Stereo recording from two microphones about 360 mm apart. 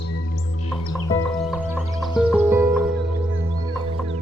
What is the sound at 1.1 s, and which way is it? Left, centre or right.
Music, centre.